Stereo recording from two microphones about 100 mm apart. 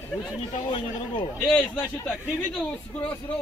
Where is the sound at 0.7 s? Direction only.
60° left (ahead or behind).